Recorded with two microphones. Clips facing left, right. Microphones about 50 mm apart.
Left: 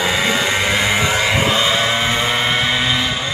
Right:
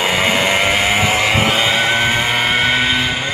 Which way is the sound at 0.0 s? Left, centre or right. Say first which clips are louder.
Right 2 dB; right.